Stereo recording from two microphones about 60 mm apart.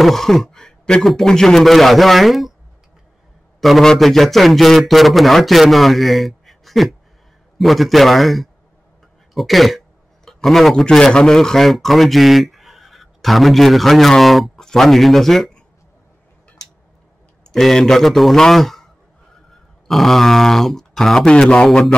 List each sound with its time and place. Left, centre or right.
0.0 s a man's voice: centre
3.6 s a man's voice: centre
17.4 s speech: centre
19.9 s speech: centre